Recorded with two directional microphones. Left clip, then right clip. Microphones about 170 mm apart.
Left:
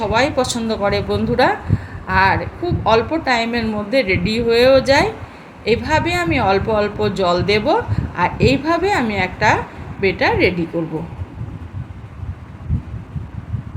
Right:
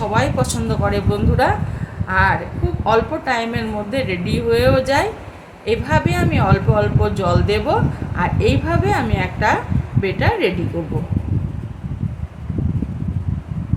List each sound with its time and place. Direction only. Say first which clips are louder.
0.1 s a woman's voice: left 3 dB; 20° left (ahead or behind)